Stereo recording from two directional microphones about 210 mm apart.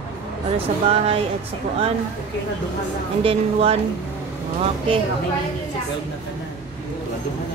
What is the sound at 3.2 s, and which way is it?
Speech, 25° right (ahead or behind).